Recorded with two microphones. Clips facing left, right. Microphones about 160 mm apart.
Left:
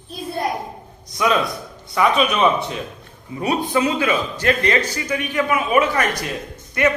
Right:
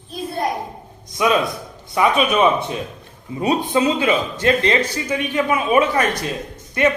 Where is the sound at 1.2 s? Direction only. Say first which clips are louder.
Right 1 dB; 20° right (ahead or behind).